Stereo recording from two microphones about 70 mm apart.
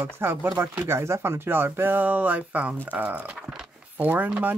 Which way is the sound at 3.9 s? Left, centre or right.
Right.